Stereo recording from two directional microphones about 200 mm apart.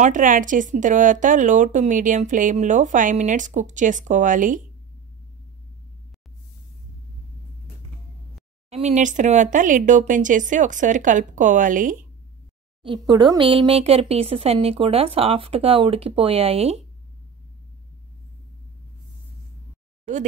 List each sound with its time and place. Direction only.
0.0 s speech: 40° right (ahead or behind)
8.6 s speech: 35° right (ahead or behind)
12.8 s speech: 20° right (ahead or behind)